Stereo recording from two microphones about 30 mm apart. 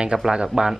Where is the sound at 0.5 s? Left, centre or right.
Right.